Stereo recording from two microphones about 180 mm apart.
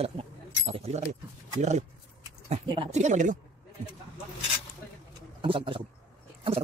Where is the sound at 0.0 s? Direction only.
35° right (ahead or behind).